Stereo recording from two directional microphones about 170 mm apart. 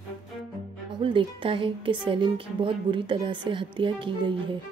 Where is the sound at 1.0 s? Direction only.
30° right (ahead or behind).